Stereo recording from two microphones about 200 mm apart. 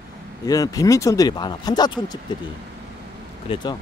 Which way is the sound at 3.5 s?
20° left (ahead or behind).